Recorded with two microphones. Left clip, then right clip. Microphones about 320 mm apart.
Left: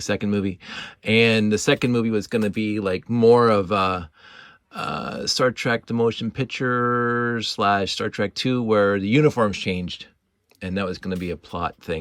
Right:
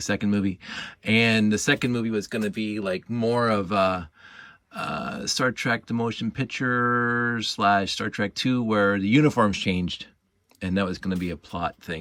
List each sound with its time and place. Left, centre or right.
0.0 s speech: centre